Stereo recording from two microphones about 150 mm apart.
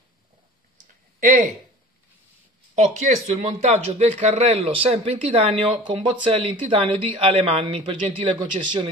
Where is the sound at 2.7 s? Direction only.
45° right (ahead or behind).